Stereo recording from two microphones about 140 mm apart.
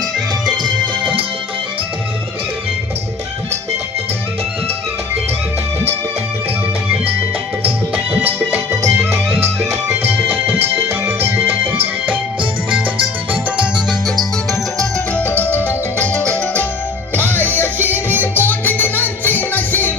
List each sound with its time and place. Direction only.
0.5 s music: 35° right (ahead or behind)
7.9 s music: 10° right (ahead or behind)
9.3 s music: 45° right (ahead or behind)
10.1 s music: 15° right (ahead or behind)
14.8 s music: 10° left (ahead or behind)
17.7 s music: 15° right (ahead or behind)
18.2 s music: 15° left (ahead or behind)